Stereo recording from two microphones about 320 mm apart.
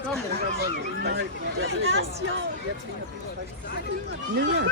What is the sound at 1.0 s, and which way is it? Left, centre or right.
Speech, right.